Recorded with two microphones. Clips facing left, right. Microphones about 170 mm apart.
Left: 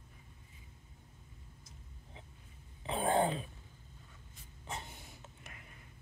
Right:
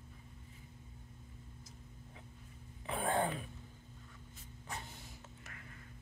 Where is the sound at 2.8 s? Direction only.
25° left (ahead or behind).